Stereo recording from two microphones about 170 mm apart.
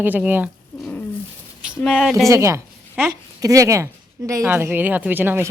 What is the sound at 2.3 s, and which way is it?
Speech, 15° right (ahead or behind).